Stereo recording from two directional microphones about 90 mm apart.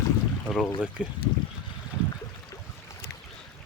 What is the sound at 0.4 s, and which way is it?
Speech, 5° left (ahead or behind).